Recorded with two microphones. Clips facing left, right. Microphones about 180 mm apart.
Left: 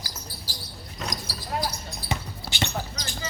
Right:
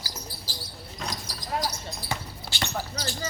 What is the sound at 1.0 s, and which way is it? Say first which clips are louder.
Basketball bounce: left 2 dB; 10° left (ahead or behind).